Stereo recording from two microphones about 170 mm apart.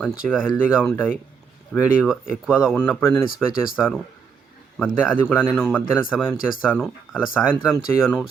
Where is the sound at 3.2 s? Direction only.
55° left (ahead or behind).